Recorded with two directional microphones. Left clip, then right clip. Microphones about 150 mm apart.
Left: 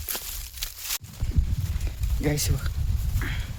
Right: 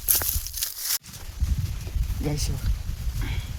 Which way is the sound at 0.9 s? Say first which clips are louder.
Right 2 dB; 40° right (ahead or behind).